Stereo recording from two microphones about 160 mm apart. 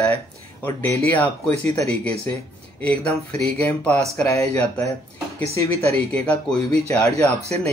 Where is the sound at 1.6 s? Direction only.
40° right (ahead or behind).